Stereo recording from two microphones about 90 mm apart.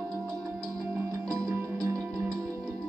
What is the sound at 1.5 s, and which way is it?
Music, 40° right (ahead or behind).